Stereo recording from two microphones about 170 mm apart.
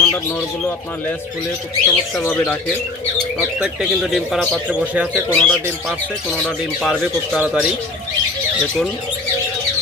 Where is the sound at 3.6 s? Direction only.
5° right (ahead or behind).